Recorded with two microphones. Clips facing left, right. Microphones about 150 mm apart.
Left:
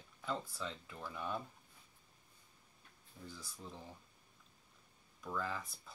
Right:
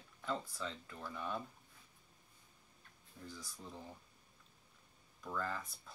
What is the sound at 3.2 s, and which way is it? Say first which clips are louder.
Speech: even; centre (ahead or behind).